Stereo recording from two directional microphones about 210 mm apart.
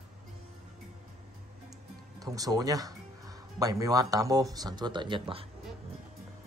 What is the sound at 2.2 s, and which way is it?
Speech, 15° right (ahead or behind).